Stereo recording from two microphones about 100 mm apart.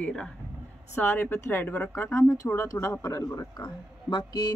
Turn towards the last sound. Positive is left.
turn(degrees=45)  # may be behind; listen again after turning